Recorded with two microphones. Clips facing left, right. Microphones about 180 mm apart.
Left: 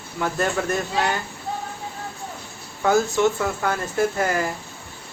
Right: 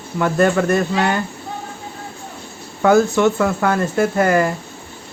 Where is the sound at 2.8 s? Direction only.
65° right (ahead or behind).